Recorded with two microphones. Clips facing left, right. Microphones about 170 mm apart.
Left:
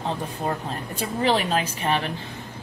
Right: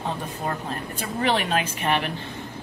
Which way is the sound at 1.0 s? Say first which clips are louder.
Left 2 dB; 30° left (ahead or behind).